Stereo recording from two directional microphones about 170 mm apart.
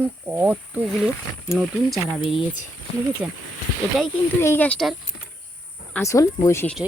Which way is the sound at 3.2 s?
5° right (ahead or behind).